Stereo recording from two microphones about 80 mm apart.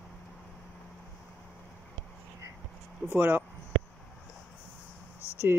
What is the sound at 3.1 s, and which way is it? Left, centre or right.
Speech, centre.